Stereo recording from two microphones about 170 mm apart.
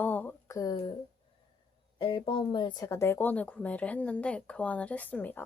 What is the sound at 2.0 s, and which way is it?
Speech, 30° left (ahead or behind).